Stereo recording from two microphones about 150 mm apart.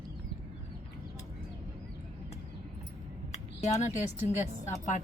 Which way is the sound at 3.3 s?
50° left (ahead or behind).